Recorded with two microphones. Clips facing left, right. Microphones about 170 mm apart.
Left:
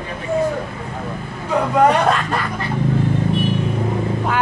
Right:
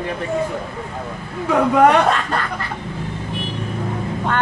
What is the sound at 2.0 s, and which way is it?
Speech, centre (ahead or behind).